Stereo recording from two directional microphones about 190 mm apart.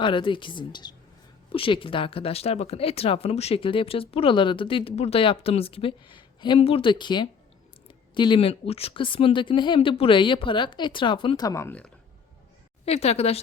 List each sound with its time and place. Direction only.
0.0 s speech: 25° left (ahead or behind); by 11.9 s 10° left (ahead or behind)
12.8 s a woman's voice: 35° left (ahead or behind)